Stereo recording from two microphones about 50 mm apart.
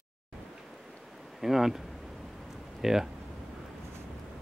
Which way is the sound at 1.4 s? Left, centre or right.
Centre.